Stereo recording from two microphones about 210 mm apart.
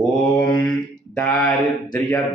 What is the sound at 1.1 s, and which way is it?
Speech, 5° left (ahead or behind).